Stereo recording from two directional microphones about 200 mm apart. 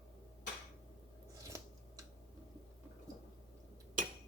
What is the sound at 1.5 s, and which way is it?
Scissors, 15° right (ahead or behind).